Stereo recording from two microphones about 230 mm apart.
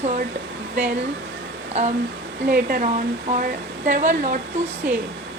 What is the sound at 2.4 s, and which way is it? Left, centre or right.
Speech, right.